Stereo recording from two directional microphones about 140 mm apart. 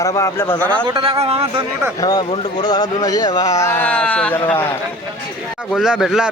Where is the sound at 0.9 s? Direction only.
35° right (ahead or behind).